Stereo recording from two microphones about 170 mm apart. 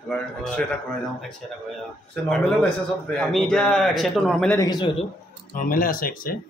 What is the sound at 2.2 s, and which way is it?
A man's voice, 5° left (ahead or behind).